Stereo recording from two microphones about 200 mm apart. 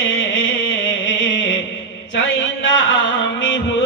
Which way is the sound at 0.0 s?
70° left (ahead or behind).